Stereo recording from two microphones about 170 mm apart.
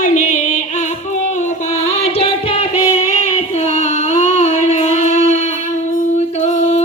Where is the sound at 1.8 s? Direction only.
40° left (ahead or behind).